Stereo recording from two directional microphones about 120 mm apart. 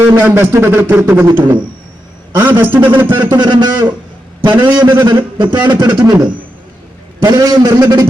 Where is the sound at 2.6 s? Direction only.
15° right (ahead or behind).